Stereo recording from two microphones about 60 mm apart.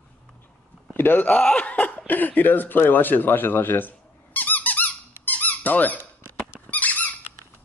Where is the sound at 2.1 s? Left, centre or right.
Left.